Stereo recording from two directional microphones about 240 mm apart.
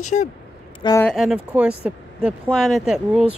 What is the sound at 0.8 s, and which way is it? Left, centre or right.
Speech, centre.